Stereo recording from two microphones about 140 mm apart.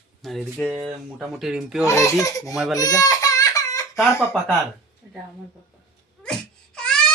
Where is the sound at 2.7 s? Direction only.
25° left (ahead or behind).